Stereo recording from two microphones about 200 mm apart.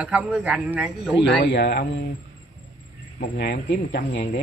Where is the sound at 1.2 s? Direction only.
60° left (ahead or behind).